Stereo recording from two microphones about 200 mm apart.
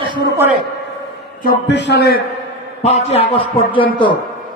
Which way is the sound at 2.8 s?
30° left (ahead or behind).